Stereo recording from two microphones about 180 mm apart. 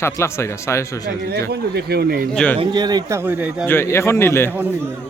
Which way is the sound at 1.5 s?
65° right (ahead or behind).